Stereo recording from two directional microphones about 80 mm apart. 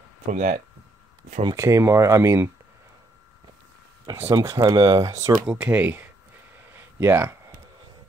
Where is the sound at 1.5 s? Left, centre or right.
Right.